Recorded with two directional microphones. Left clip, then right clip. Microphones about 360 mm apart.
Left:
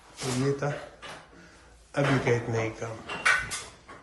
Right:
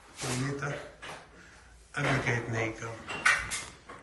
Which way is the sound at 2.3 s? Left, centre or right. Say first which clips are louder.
Left 4 dB; centre.